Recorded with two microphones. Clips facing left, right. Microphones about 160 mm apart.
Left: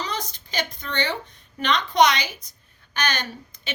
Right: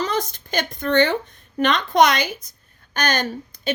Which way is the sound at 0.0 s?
50° right (ahead or behind).